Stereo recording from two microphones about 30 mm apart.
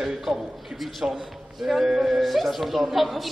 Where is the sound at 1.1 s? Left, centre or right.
Centre.